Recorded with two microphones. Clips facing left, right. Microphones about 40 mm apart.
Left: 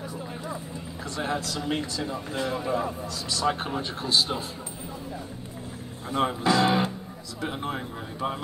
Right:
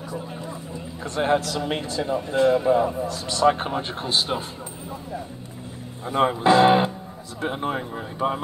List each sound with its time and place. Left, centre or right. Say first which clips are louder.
1.0 s speech: right 8 dB; right
2.7 s speech: right 8 dB; centre
3.1 s speech: right 6 dB; right
6.0 s speech: right 6 dB; right
7.4 s speech: right 5 dB; right